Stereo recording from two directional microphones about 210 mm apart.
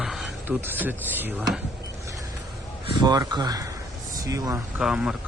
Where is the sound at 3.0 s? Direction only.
20° right (ahead or behind).